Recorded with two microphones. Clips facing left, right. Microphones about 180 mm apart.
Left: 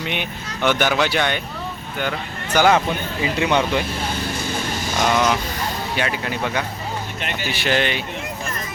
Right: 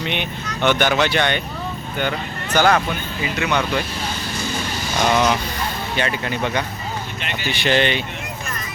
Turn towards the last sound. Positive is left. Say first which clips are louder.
# right 2 dB
turn(degrees=5)  # may be behind; listen again after turning